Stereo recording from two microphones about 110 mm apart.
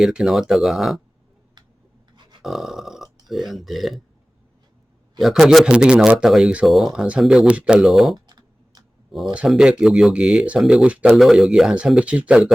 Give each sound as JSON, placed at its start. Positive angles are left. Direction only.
{"t": 0.0, "sound": "speech", "side_deg": -5}
{"t": 2.4, "sound": "a sound", "side_deg": 0}
{"t": 3.2, "sound": "speech", "side_deg": 0}
{"t": 5.2, "sound": "speech", "side_deg": -5}
{"t": 8.1, "sound": "computer keyboard", "side_deg": -40}
{"t": 9.5, "sound": "speech", "side_deg": -5}